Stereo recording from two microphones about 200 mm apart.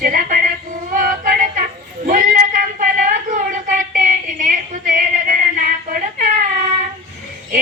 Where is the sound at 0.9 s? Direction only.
45° right (ahead or behind).